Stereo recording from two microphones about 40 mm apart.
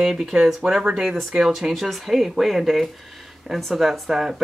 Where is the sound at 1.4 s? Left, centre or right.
Centre.